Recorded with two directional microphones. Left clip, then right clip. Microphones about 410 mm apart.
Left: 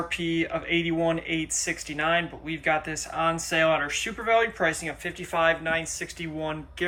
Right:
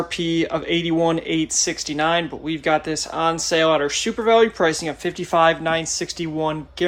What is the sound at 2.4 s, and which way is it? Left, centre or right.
Speech, centre.